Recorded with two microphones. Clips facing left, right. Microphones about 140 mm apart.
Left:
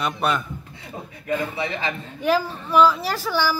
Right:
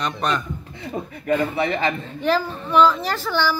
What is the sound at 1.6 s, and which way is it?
Speech, 50° right (ahead or behind).